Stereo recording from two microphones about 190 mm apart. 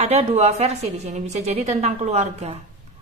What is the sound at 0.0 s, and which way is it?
A woman's voice, 35° right (ahead or behind).